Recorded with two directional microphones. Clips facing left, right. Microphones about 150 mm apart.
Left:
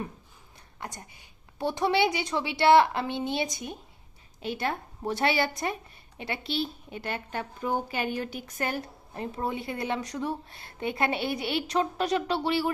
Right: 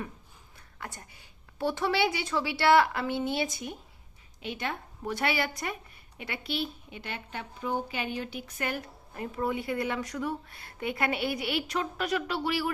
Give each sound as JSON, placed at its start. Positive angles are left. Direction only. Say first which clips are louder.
{"t": 0.8, "sound": "a woman's voice", "louder": "left 2 dB", "side_deg": 20}
{"t": 4.4, "sound": "a woman's voice", "louder": "left 4 dB", "side_deg": 40}
{"t": 6.9, "sound": "a woman's voice", "louder": "left 5 dB", "side_deg": 45}